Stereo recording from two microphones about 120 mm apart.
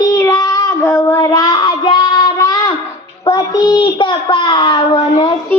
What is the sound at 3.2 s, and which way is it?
A child's voice, 30° left (ahead or behind).